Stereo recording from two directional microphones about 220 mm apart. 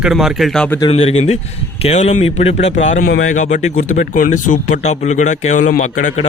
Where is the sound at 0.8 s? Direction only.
25° left (ahead or behind).